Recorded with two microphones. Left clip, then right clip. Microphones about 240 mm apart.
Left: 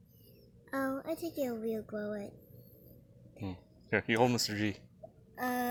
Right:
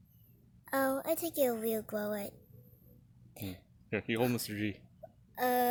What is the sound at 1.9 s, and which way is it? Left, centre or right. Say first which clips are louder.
Speech: right 3 dB; right.